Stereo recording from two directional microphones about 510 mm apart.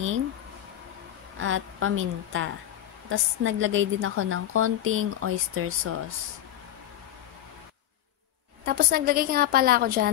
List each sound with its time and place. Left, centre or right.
1.4 s a woman's voice: right
8.6 s a woman's voice: centre